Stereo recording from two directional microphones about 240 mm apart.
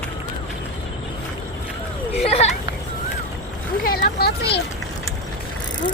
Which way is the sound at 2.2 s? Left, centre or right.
Left.